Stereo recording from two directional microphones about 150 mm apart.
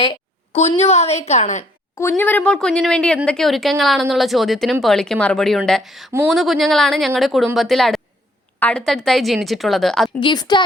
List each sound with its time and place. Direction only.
0.0 s a sound: 35° left (ahead or behind)
0.8 s a woman's voice: 45° left (ahead or behind)
2.0 s speech: 15° left (ahead or behind)
10.2 s speech: 30° left (ahead or behind)